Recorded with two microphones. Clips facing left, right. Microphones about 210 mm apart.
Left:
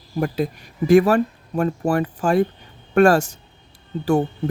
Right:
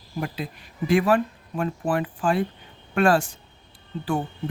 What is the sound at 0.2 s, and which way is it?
Speech, 45° left (ahead or behind).